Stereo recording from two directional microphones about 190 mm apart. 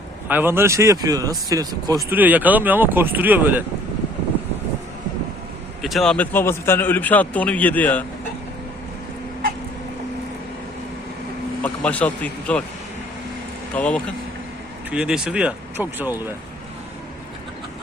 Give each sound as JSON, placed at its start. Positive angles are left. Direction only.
{"t": 0.3, "sound": "speech", "side_deg": -10}
{"t": 5.8, "sound": "speech", "side_deg": 0}
{"t": 11.6, "sound": "speech", "side_deg": 5}
{"t": 13.7, "sound": "speech", "side_deg": 5}
{"t": 14.8, "sound": "speech", "side_deg": -5}